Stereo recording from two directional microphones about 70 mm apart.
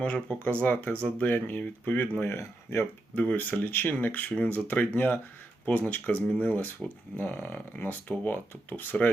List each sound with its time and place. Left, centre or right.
0.0 s speech: left
2.2 s speech: left
3.2 s speech: left